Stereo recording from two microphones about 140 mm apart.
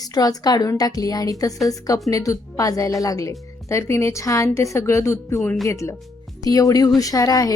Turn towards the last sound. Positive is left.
turn(degrees=25)  # may be behind; listen again after turning